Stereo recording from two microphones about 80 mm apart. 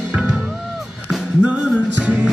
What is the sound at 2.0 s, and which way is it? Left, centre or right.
Music, centre.